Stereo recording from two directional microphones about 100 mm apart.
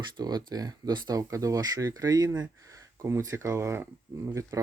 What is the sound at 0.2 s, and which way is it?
Speech, 40° right (ahead or behind).